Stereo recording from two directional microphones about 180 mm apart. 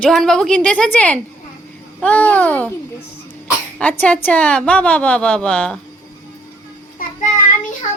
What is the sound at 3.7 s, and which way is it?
A woman's voice, 10° left (ahead or behind).